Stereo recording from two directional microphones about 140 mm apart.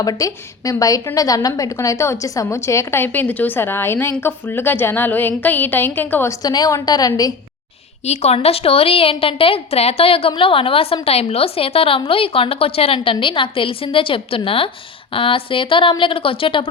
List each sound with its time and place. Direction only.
0.0 s a woman's voice: 25° left (ahead or behind)
6.4 s a woman's voice: 30° left (ahead or behind)
8.0 s a woman's voice: 50° left (ahead or behind)